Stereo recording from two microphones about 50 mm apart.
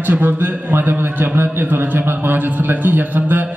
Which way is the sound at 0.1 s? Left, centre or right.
Right.